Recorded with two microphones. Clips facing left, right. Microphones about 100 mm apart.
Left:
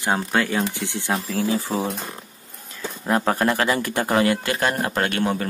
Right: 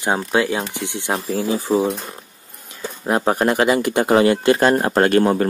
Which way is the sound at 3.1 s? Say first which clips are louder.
Right 3 dB; 20° right (ahead or behind).